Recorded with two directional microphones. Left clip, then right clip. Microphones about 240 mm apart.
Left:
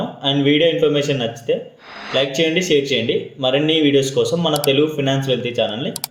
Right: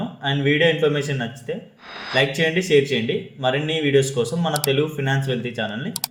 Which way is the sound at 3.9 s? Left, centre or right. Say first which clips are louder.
Left 3 dB; right.